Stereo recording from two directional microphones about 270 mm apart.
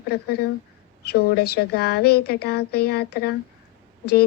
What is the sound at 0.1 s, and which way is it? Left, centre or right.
Speech, left.